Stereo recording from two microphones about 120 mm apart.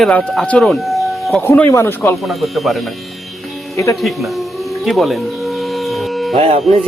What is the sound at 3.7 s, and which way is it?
Speech, 25° left (ahead or behind).